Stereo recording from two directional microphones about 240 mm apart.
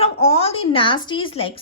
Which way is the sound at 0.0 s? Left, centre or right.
Left.